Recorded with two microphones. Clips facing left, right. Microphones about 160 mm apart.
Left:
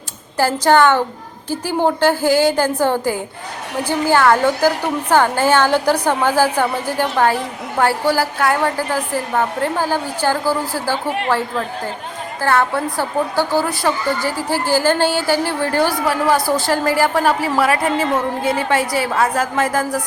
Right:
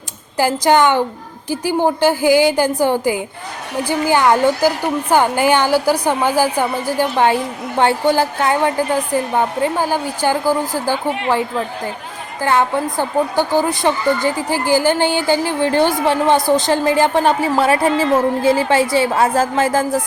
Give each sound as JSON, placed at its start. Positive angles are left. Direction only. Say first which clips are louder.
{"t": 0.3, "sound": "a woman's voice", "louder": "even", "side_deg": -15}
{"t": 12.4, "sound": "a woman's voice", "louder": "right 1 dB", "side_deg": -15}